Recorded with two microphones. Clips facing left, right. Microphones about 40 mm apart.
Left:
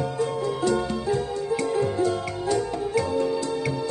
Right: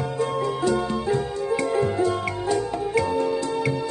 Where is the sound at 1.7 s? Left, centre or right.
Right.